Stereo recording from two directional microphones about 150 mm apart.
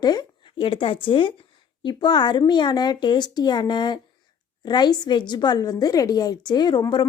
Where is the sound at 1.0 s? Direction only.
35° left (ahead or behind).